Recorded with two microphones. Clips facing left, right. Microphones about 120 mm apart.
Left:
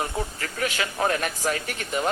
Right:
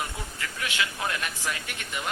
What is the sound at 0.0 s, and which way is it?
A man's voice, 40° left (ahead or behind).